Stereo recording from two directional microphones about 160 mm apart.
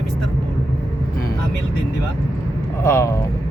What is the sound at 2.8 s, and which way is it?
Speech, 15° left (ahead or behind).